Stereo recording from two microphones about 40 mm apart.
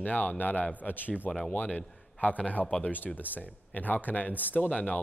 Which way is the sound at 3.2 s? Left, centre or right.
Left.